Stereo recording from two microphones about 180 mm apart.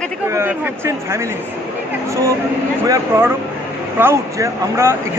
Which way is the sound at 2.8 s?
20° right (ahead or behind).